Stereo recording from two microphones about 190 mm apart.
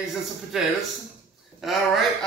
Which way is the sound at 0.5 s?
Centre (ahead or behind).